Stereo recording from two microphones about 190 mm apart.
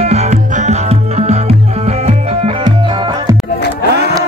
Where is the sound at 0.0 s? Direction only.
35° right (ahead or behind).